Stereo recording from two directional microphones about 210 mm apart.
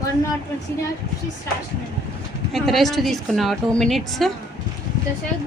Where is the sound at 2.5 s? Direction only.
Centre (ahead or behind).